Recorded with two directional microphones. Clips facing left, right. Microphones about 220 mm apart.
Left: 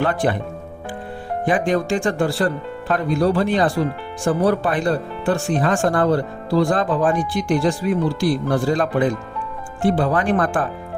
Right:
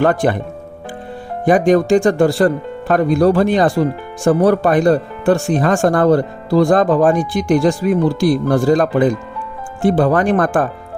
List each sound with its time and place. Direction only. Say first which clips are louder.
0.0 s speech: right 5 dB; 45° right (ahead or behind)
1.5 s speech: right 8 dB; 45° right (ahead or behind)